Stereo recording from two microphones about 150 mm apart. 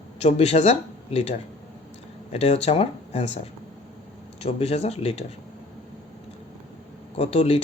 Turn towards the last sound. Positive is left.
turn(degrees=40)  # may be behind; listen again after turning